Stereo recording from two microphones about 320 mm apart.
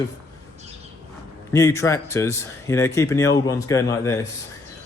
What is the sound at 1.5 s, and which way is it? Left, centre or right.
A man's voice, centre.